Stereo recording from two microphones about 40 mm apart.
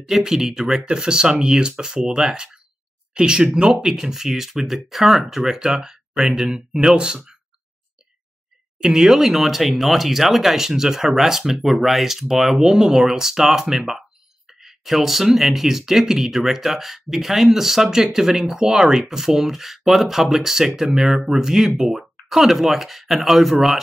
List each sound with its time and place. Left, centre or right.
0.0 s speech: centre
3.8 s speech: centre
8.7 s speech: centre